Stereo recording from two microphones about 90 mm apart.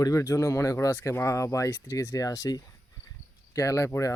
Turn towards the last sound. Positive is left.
turn(degrees=35)  # may be behind; listen again after turning